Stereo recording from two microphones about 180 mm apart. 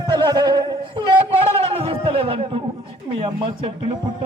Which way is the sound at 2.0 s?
30° right (ahead or behind).